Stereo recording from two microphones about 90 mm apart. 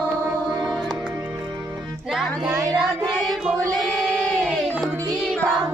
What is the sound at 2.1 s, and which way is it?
Music, 5° right (ahead or behind).